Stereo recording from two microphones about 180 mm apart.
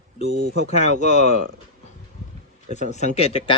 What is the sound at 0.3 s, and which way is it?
Speech, 80° right.